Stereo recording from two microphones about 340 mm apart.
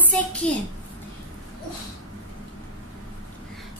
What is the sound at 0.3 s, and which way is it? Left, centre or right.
Speech, centre.